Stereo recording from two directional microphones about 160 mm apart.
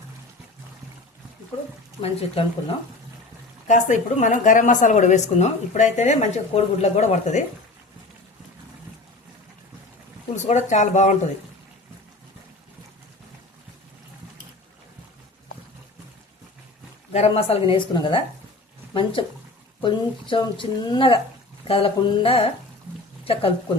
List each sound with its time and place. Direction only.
2.0 s speech: 35° left (ahead or behind)
3.7 s a woman's voice: 50° left (ahead or behind)
10.3 s a woman's voice: 45° left (ahead or behind)
17.1 s speech: 40° left (ahead or behind)
19.8 s speech: 30° left (ahead or behind)